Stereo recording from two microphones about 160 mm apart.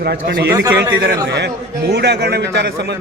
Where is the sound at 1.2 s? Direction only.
90° right.